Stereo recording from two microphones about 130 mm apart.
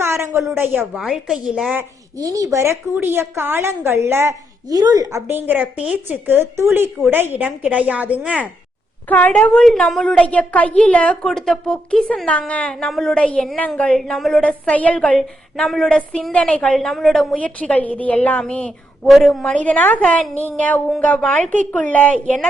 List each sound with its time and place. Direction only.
0.0 s a woman's voice: 20° right (ahead or behind)
0.9 s a woman's voice: 5° right (ahead or behind)
2.1 s a woman's voice: 25° right (ahead or behind)
5.3 s speech: 15° right (ahead or behind)
9.0 s a woman's voice: 10° left (ahead or behind)